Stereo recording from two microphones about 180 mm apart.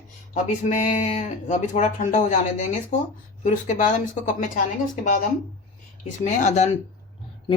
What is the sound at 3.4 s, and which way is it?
Speech, 45° left (ahead or behind).